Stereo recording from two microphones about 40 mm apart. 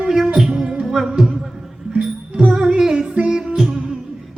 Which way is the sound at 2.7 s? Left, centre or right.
Centre.